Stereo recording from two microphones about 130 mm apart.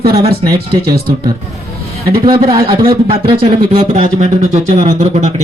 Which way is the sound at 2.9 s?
40° right (ahead or behind).